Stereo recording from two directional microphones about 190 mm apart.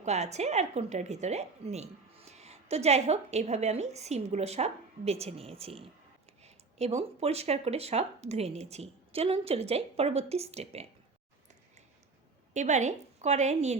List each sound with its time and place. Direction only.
0.0 s a woman's voice: 35° right (ahead or behind)
12.5 s a woman's voice: 40° right (ahead or behind)